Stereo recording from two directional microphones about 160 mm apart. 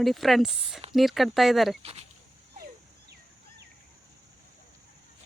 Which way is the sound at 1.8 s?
40° right (ahead or behind).